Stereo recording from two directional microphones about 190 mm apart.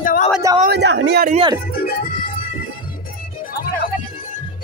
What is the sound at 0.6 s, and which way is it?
Speech, 65° right (ahead or behind).